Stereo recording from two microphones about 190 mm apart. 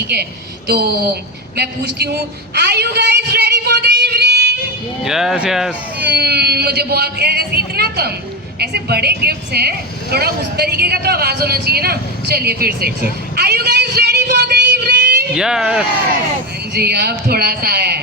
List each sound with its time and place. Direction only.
0.7 s speech: 55° right (ahead or behind)
2.6 s a sound: 60° right (ahead or behind)
5.0 s speech: centre (ahead or behind)
6.1 s speech: 55° right (ahead or behind)
14.3 s a sound: 60° right (ahead or behind)
15.4 s speech: 5° right (ahead or behind)
16.7 s speech: 55° right (ahead or behind)